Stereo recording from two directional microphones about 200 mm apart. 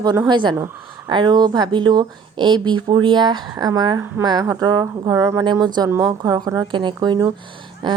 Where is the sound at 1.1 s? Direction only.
20° right (ahead or behind).